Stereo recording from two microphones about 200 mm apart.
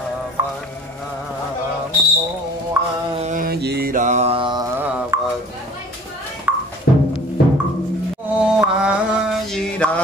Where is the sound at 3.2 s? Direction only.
40° right (ahead or behind); by 4.7 s 25° right (ahead or behind).